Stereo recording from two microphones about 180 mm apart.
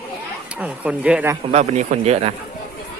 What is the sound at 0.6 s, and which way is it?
Speech, 5° right (ahead or behind).